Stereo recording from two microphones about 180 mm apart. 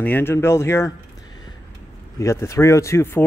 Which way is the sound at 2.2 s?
15° left (ahead or behind).